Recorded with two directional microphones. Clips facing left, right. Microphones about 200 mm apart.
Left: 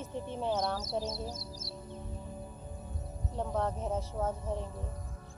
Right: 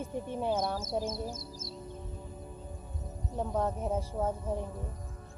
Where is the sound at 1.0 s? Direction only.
50° right (ahead or behind).